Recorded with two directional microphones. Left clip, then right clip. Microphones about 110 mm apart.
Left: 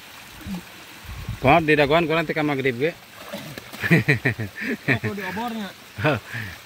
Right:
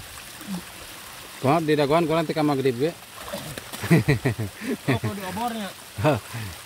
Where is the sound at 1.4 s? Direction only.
15° left (ahead or behind).